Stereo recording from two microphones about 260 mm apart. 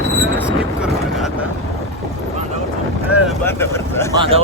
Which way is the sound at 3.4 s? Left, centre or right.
Centre.